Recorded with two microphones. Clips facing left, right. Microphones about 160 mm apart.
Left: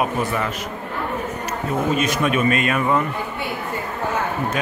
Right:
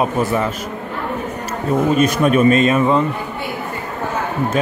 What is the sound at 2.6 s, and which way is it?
Speech, 25° right (ahead or behind).